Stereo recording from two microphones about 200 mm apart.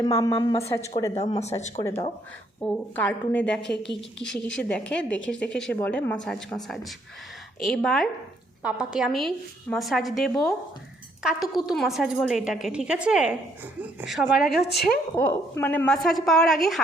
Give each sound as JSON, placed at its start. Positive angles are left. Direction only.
{"t": 0.0, "sound": "a woman's voice", "side_deg": 20}
{"t": 1.1, "sound": "speech", "side_deg": 30}
{"t": 2.6, "sound": "a woman's voice", "side_deg": 5}